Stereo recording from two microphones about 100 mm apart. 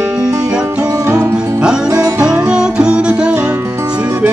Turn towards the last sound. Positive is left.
turn(degrees=-10)  # may be behind; listen again after turning